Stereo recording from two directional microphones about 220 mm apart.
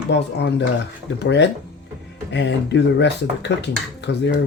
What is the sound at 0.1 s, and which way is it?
Speech, 55° left (ahead or behind).